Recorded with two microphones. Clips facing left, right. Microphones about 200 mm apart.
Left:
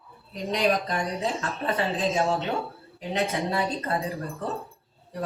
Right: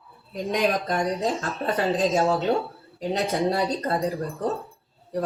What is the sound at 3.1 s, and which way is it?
Speech, 30° right (ahead or behind).